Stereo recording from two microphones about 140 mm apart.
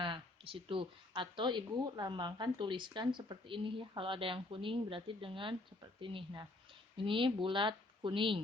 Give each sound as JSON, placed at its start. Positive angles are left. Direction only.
{"t": 0.0, "sound": "speech", "side_deg": -40}